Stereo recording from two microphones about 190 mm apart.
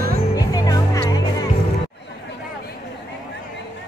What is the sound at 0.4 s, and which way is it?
Music, 20° left (ahead or behind).